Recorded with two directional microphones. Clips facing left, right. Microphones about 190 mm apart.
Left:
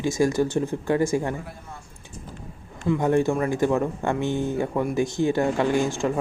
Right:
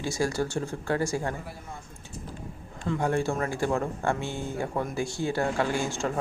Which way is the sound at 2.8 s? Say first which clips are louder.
Left 6 dB; 20° left (ahead or behind).